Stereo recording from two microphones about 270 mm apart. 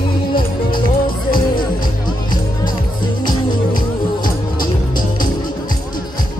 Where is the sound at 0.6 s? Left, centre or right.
Centre.